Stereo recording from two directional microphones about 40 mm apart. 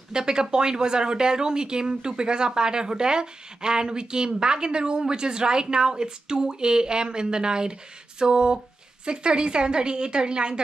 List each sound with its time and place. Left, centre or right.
0.1 s speech: centre